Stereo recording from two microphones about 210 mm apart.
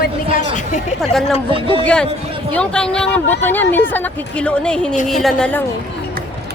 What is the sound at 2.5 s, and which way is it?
A woman's voice, 5° left (ahead or behind).